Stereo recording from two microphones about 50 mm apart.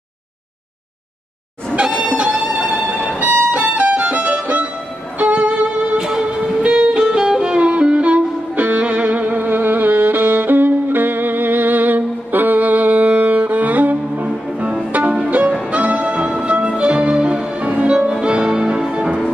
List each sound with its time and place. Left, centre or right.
1.8 s music: right
2.3 s music: centre
5.9 s music: centre; by 9.5 s right
9.5 s music: right
14.6 s music: right
15.7 s violin: right
16.4 s music: right